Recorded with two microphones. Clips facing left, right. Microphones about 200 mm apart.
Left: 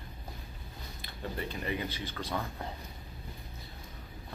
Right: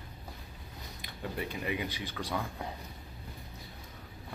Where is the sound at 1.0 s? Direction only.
15° right (ahead or behind).